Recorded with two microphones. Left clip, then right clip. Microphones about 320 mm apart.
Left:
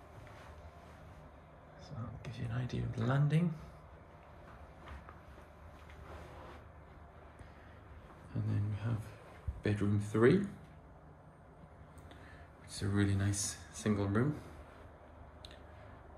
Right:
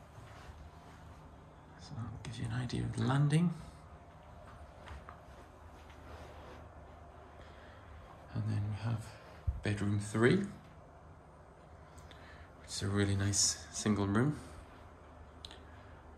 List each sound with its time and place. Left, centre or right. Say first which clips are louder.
1.9 s speech: right 1 dB; centre
8.3 s a sound: left 1 dB; centre
9.6 s speech: left 2 dB; centre
12.6 s speech: right 1 dB; centre